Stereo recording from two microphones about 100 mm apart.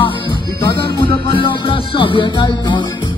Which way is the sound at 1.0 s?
60° left (ahead or behind).